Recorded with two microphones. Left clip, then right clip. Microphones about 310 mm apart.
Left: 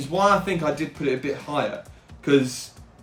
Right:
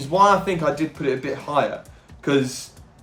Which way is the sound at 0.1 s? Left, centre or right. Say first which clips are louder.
Right 4 dB; centre.